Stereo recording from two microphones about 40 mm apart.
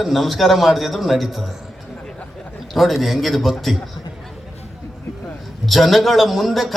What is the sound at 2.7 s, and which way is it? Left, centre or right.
A man's voice, centre.